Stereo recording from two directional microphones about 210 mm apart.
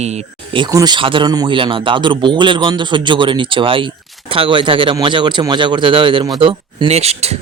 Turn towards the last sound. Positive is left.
turn(degrees=-30)  # may be behind; listen again after turning